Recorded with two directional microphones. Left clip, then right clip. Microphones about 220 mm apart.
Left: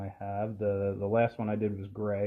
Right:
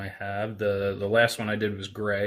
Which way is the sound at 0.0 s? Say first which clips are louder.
Right 4 dB; 50° right (ahead or behind).